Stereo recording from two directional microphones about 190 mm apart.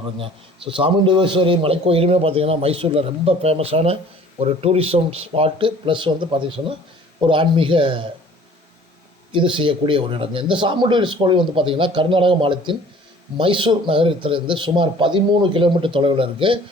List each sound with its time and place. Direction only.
0.2 s a man's voice: 30° right (ahead or behind)
9.3 s a man's voice: 25° right (ahead or behind)